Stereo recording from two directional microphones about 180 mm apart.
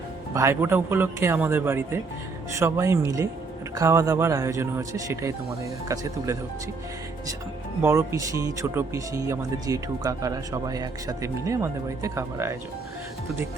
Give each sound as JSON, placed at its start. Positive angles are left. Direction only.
{"t": 0.3, "sound": "speech", "side_deg": -15}
{"t": 7.8, "sound": "speech", "side_deg": -15}